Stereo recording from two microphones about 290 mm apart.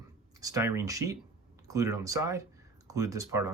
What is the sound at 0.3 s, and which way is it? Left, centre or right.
Speech, centre.